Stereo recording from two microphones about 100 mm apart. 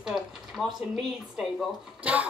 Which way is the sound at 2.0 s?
15° right (ahead or behind).